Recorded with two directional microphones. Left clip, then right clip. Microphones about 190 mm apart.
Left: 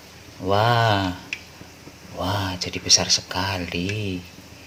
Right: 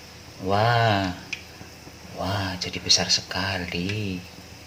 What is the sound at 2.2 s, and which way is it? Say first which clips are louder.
Speech: left 2 dB; 25° left (ahead or behind).